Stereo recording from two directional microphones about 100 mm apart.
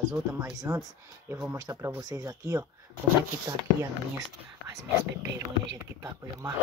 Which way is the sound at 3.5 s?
45° right (ahead or behind).